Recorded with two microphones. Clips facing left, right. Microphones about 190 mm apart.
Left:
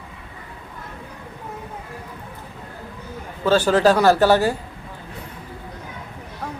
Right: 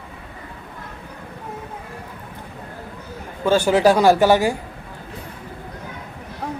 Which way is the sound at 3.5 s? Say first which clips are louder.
Right 1 dB; 10° right (ahead or behind).